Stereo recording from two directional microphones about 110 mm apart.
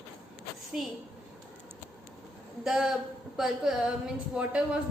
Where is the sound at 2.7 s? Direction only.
5° right (ahead or behind).